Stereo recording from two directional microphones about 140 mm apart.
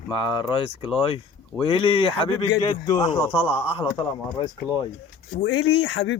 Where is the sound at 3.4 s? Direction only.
10° right (ahead or behind).